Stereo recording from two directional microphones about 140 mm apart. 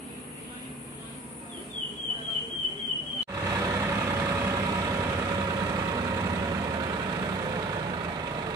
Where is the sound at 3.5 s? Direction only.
25° right (ahead or behind).